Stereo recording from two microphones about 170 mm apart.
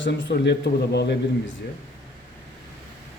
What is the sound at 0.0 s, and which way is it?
A man's voice, 85° left.